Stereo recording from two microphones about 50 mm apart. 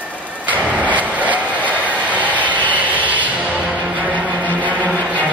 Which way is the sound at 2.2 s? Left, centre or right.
Right.